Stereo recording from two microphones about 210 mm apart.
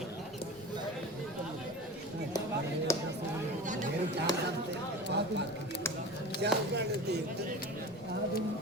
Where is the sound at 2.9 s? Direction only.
15° left (ahead or behind).